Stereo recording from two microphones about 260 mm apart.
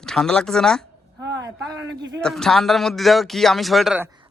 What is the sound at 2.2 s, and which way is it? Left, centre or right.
Speech, centre.